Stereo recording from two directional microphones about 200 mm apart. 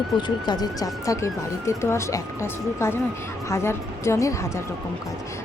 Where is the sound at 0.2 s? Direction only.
20° left (ahead or behind).